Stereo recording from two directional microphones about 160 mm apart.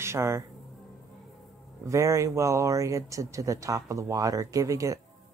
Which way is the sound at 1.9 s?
20° right (ahead or behind).